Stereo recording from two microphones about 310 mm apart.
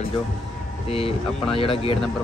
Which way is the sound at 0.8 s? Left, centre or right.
Centre.